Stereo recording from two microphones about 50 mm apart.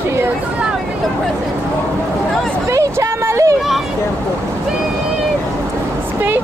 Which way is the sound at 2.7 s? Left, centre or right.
Right.